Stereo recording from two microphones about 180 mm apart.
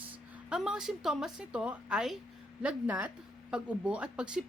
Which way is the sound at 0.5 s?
5° right (ahead or behind).